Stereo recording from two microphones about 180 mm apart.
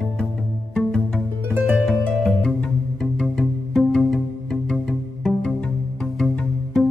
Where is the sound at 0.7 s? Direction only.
5° left (ahead or behind).